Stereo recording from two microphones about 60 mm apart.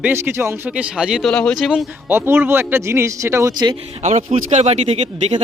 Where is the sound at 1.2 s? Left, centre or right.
Centre.